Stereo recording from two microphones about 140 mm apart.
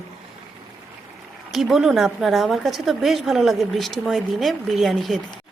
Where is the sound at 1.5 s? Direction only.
Centre (ahead or behind).